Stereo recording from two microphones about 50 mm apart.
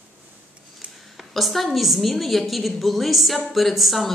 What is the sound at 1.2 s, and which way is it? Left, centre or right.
A woman's voice, centre.